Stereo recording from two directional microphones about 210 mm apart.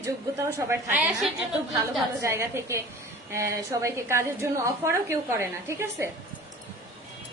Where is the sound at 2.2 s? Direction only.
15° right (ahead or behind).